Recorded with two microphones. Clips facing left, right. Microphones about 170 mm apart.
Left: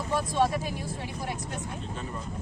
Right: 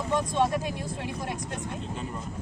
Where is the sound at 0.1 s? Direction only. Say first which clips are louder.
Right 1 dB; 10° left (ahead or behind).